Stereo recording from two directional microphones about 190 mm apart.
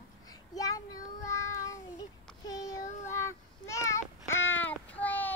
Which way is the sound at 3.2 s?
15° left (ahead or behind).